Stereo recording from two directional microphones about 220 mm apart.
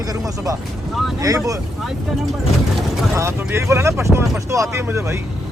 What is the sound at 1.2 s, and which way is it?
Speech, 15° right (ahead or behind).